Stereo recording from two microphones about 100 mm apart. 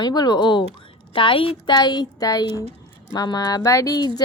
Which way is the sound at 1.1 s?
60° left (ahead or behind).